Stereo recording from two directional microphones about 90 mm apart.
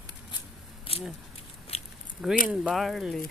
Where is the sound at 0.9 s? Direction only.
90° left.